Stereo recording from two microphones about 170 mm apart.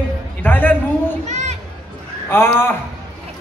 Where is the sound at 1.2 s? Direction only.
45° right (ahead or behind).